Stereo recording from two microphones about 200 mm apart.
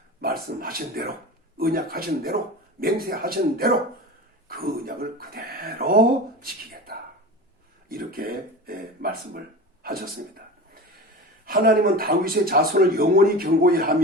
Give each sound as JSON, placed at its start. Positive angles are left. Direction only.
{"t": 0.2, "sound": "speech", "side_deg": -50}
{"t": 11.4, "sound": "speech", "side_deg": -45}